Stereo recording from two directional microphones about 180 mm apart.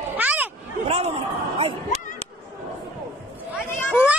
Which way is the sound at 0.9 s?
35° right (ahead or behind).